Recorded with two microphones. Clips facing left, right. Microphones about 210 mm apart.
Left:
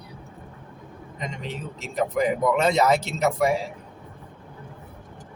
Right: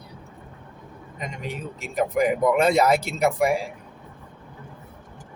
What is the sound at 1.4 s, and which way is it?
Speech, 10° right (ahead or behind).